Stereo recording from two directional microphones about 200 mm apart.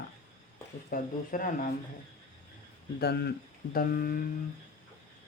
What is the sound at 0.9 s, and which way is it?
Speech, 40° left (ahead or behind).